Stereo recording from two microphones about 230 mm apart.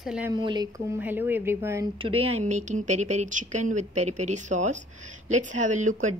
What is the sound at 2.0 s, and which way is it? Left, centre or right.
Speech, right.